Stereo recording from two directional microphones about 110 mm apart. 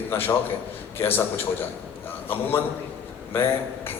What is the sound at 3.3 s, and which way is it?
Speech, 20° left (ahead or behind).